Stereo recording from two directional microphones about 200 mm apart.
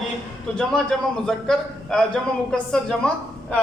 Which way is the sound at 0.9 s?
Centre (ahead or behind).